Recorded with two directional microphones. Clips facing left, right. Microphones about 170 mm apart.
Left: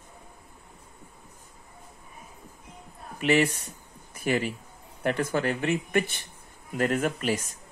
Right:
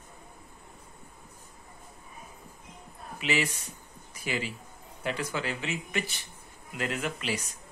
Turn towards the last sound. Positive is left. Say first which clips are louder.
# left 6 dB
turn(degrees=50)  # may be behind; listen again after turning